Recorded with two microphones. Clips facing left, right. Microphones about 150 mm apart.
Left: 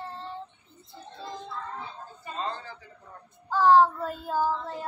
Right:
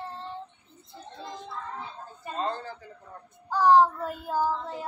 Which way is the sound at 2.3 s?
50° right (ahead or behind).